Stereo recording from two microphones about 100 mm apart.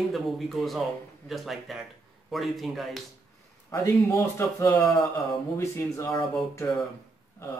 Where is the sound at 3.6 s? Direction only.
30° left (ahead or behind).